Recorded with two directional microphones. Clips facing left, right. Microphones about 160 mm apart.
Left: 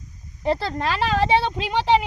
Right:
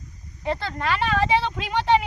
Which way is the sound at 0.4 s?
35° left (ahead or behind).